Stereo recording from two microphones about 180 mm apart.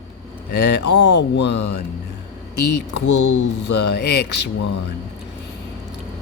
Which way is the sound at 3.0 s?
75° left (ahead or behind).